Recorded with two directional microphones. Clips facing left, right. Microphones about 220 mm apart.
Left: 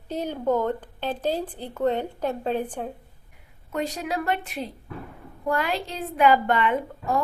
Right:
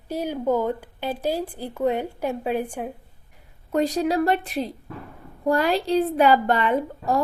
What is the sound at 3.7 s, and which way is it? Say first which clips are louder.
A woman's voice: right 7 dB; 35° right (ahead or behind).